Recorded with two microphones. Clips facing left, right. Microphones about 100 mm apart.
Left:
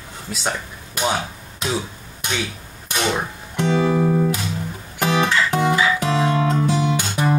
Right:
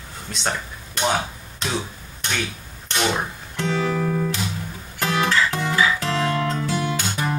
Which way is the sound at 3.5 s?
15° left (ahead or behind).